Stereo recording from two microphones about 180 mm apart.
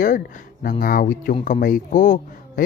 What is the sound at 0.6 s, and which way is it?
Speech, 50° left (ahead or behind).